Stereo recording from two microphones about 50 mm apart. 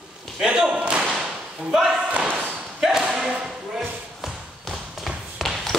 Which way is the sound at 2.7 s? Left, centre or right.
Centre.